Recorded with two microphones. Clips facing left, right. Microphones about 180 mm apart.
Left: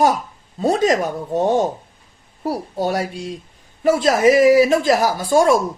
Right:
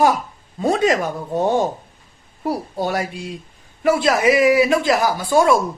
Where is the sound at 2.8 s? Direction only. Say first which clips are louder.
Left 2 dB; 35° left (ahead or behind).